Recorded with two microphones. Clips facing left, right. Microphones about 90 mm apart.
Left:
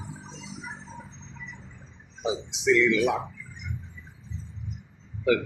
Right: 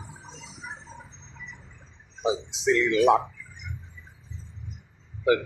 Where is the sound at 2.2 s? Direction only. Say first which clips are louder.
Right 3 dB; 35° right (ahead or behind).